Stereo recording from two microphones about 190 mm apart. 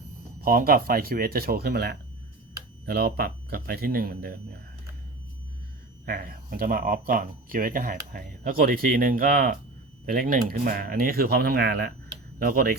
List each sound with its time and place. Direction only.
0.4 s speech: 50° right (ahead or behind)
6.1 s speech: 50° right (ahead or behind)